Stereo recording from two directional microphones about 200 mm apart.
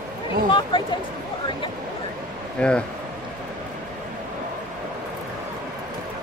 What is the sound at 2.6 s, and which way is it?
Speech, 5° left (ahead or behind).